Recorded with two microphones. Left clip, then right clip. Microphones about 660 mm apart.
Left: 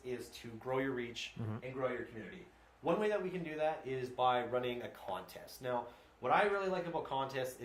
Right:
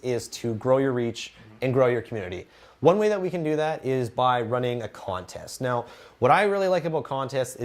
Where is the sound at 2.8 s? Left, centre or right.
Right.